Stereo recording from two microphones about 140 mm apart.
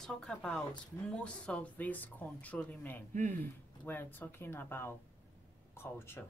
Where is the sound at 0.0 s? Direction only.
5° left (ahead or behind).